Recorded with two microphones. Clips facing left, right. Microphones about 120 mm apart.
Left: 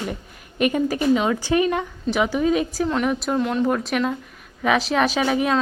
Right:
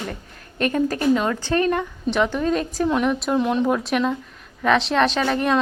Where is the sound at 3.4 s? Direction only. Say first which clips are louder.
Right 1 dB; 20° right (ahead or behind).